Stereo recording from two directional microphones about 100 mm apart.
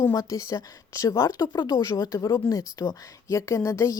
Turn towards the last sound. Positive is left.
turn(degrees=30)  # may be behind; listen again after turning